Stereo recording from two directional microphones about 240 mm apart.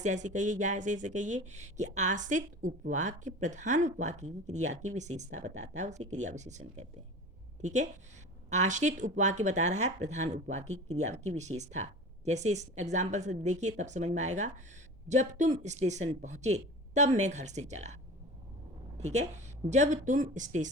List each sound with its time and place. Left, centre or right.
0.0 s speech: right
18.9 s speech: right